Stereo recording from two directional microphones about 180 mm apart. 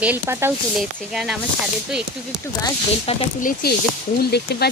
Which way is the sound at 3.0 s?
50° left (ahead or behind).